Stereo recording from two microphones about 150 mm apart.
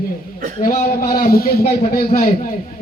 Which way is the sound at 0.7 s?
70° left (ahead or behind).